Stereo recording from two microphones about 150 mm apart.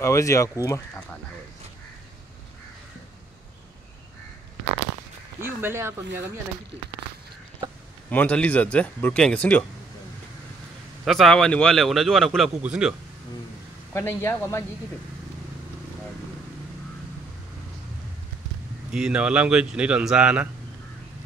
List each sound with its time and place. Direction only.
0.0 s speech: 20° left (ahead or behind)
5.4 s speech: 15° right (ahead or behind)
8.1 s speech: 10° left (ahead or behind)
11.1 s speech: 5° left (ahead or behind)
13.9 s speech: 15° left (ahead or behind)
18.9 s speech: 5° right (ahead or behind)